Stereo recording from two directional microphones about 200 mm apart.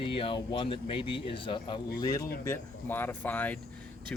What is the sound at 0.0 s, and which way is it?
Speech, 25° left (ahead or behind).